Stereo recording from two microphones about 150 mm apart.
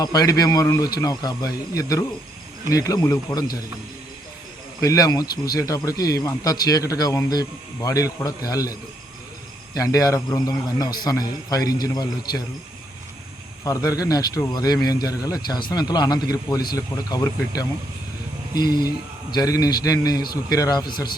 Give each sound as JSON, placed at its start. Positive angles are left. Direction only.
{"t": 0.0, "sound": "speech", "side_deg": 25}
{"t": 4.8, "sound": "speech", "side_deg": 25}
{"t": 13.7, "sound": "speech", "side_deg": 25}